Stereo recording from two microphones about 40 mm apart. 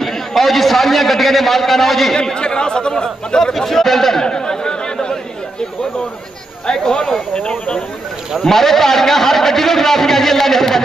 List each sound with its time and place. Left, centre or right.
0.0 s a man's voice: centre
2.1 s speech: left
3.5 s chatter: centre
6.7 s a sound: centre
8.4 s a man's voice: centre